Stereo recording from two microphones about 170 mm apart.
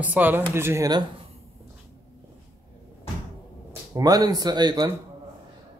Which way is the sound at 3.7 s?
20° right (ahead or behind).